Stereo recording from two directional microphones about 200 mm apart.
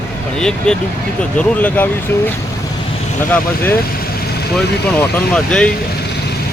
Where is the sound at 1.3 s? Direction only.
10° left (ahead or behind).